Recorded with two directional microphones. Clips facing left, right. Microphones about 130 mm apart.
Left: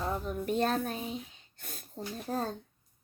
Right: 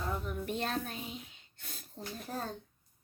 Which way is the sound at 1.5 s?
50° left (ahead or behind).